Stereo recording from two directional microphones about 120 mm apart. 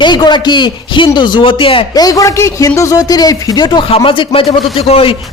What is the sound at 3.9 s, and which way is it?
Speech, 50° left (ahead or behind).